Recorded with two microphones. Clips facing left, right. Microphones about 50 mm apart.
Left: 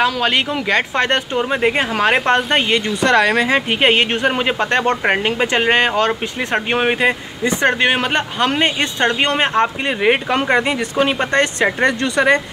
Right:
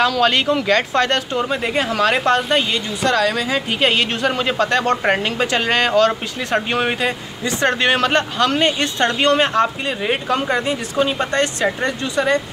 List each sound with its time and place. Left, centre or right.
0.0 s speech: centre; by 10.1 s left
10.3 s speech: left
11.8 s speech: left